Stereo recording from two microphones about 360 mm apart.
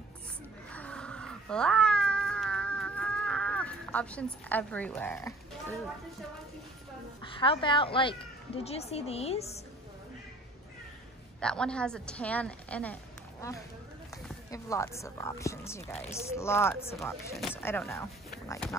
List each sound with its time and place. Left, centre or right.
0.7 s cat: centre
7.2 s speech: centre
11.3 s a woman's voice: centre